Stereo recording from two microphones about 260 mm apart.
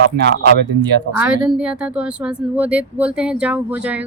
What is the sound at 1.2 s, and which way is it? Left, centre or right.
A woman's voice, centre.